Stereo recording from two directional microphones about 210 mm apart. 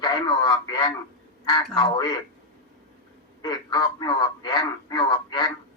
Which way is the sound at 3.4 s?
20° left (ahead or behind).